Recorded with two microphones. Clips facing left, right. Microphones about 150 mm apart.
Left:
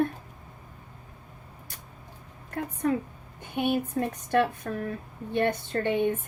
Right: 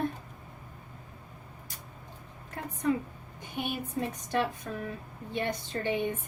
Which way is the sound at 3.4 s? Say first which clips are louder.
Left 8 dB; 60° left (ahead or behind).